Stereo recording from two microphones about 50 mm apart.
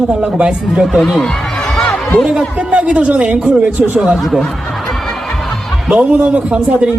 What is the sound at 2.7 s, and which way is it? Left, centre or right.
Speech, right.